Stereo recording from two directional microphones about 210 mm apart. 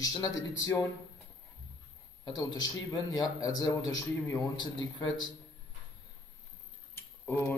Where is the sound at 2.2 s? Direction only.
20° left (ahead or behind).